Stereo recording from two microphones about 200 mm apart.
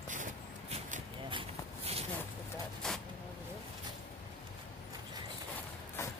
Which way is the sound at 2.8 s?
5° left (ahead or behind).